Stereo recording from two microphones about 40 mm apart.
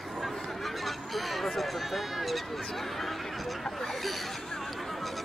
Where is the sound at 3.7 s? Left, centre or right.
Centre.